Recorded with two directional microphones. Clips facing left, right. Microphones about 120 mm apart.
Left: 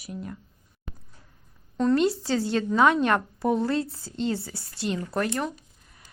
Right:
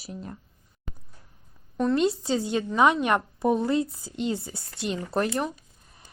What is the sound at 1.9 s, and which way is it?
A woman's voice, 20° right (ahead or behind).